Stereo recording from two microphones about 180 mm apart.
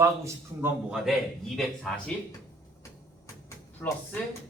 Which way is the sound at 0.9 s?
Centre (ahead or behind).